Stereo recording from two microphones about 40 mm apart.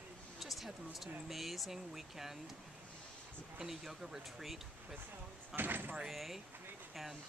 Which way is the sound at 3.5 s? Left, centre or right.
Centre.